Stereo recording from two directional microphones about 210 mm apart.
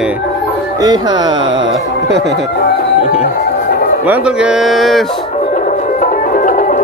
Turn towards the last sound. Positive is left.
turn(degrees=40)  # may be behind; listen again after turning